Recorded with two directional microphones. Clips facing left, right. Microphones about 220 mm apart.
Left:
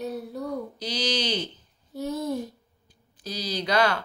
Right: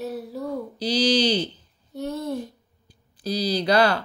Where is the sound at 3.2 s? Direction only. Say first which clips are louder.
Right 7 dB; 35° right (ahead or behind).